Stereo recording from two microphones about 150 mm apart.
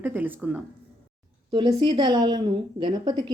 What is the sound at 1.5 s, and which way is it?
A woman's voice, 30° right (ahead or behind).